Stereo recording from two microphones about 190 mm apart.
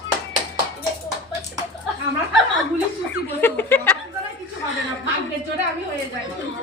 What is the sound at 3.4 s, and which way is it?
Speech, 10° left (ahead or behind).